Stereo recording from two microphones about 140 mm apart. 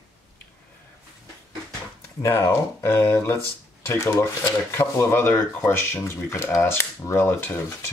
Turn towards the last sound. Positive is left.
turn(degrees=20)  # may be behind; listen again after turning